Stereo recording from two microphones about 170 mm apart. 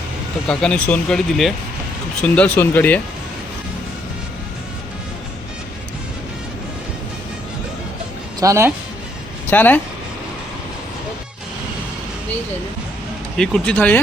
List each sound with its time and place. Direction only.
0.4 s speech: 5° left (ahead or behind)
8.4 s speech: 15° right (ahead or behind)
9.5 s speech: 10° left (ahead or behind)
13.3 s speech: 5° left (ahead or behind)